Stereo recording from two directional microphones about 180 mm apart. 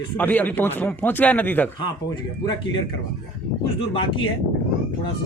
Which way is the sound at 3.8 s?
30° left (ahead or behind).